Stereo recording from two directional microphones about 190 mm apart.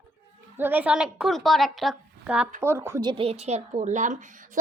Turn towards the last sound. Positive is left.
turn(degrees=-45)  # may be behind; listen again after turning